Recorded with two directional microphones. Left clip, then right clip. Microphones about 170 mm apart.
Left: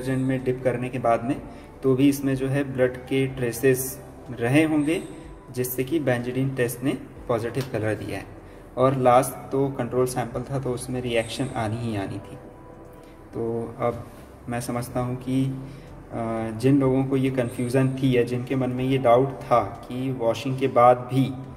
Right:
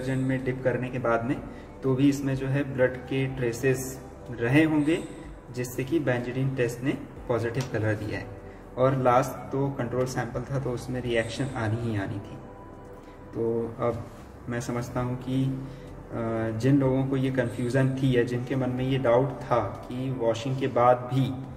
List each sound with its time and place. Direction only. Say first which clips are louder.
0.0 s a man's voice: left 3 dB; 35° left (ahead or behind)
14.5 s a man's voice: left 3 dB; 30° left (ahead or behind)